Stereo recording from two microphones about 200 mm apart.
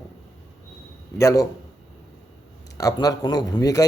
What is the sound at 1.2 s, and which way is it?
Speech, 15° left (ahead or behind).